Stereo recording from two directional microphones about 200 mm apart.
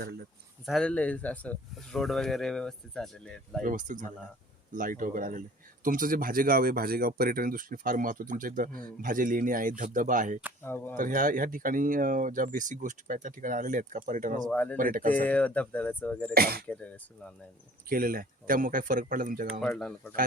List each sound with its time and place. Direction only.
0.6 s speech: centre (ahead or behind)
3.6 s speech: 40° right (ahead or behind)
10.6 s speech: 10° left (ahead or behind)
10.9 s speech: 45° right (ahead or behind)
14.4 s speech: 10° left (ahead or behind)
14.8 s speech: 45° right (ahead or behind)
15.1 s speech: 5° left (ahead or behind)
16.3 s speech: 50° right (ahead or behind)
16.6 s speech: 5° left (ahead or behind)
17.8 s speech: 45° right (ahead or behind)
19.6 s speech: 5° left (ahead or behind)